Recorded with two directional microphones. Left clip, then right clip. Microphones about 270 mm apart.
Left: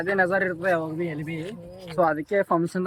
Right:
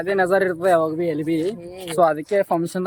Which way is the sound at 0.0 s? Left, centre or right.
Centre.